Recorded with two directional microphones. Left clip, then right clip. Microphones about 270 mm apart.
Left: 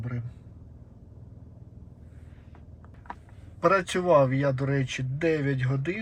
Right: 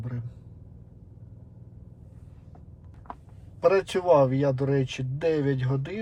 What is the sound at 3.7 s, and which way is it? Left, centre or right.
Speech, centre.